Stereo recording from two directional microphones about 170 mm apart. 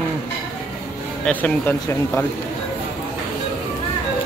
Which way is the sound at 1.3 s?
10° left (ahead or behind).